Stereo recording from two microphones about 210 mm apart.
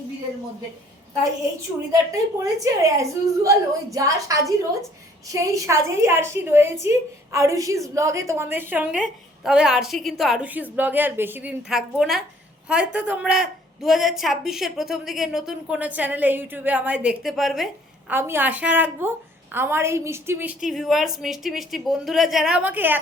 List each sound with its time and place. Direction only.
2.4 s a woman's voice: 15° right (ahead or behind)